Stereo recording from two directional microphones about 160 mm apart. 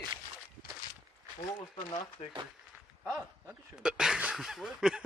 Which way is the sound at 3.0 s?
10° right (ahead or behind).